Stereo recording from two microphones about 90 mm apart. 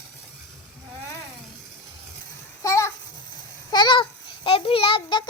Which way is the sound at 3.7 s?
55° left (ahead or behind).